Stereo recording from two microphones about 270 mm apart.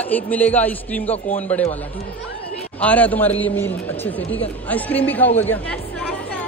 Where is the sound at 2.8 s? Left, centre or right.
Centre.